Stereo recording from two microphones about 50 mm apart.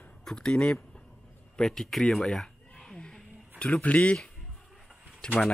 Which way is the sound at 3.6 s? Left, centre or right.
Left.